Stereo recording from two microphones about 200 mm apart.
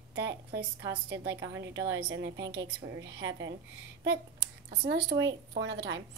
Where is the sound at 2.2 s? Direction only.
60° right (ahead or behind).